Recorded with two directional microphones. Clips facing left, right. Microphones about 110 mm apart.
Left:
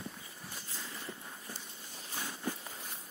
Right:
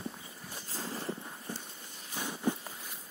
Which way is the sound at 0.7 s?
30° right (ahead or behind).